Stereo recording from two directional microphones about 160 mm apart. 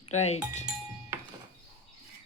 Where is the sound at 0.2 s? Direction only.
45° left (ahead or behind).